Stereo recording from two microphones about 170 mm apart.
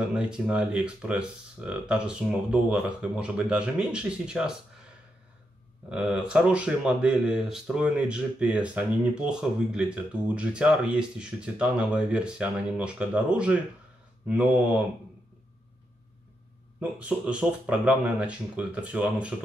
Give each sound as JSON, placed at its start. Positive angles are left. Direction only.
{"t": 0.1, "sound": "speech", "side_deg": -5}
{"t": 5.9, "sound": "speech", "side_deg": -5}
{"t": 17.0, "sound": "speech", "side_deg": -5}